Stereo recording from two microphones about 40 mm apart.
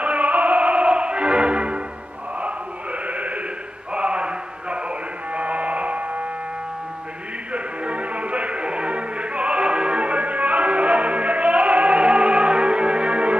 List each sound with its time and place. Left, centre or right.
0.0 s music: right
3.1 s a sound: right
3.9 s mantra: right
5.3 s hum: right
7.5 s music: right